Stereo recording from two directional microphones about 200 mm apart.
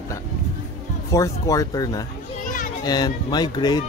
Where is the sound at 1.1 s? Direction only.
15° left (ahead or behind).